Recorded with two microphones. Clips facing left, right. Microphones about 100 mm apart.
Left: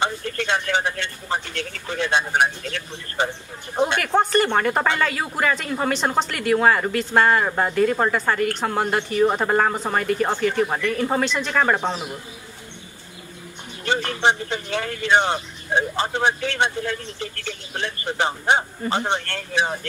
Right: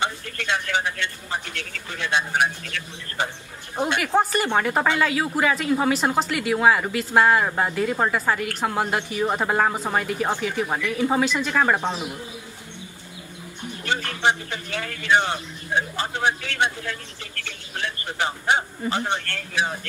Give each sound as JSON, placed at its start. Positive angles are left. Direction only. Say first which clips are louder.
{"t": 0.0, "sound": "speech", "louder": "left 3 dB", "side_deg": 35}
{"t": 3.8, "sound": "speech", "louder": "left 2 dB", "side_deg": -5}
{"t": 13.8, "sound": "speech", "louder": "left 3 dB", "side_deg": 25}